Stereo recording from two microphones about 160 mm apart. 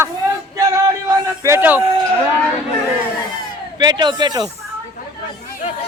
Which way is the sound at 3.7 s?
25° right (ahead or behind).